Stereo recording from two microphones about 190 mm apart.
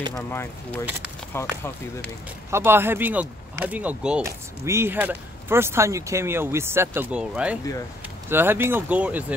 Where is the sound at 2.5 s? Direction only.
10° right (ahead or behind).